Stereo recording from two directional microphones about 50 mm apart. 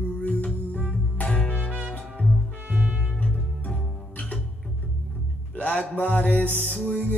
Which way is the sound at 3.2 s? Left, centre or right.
Left.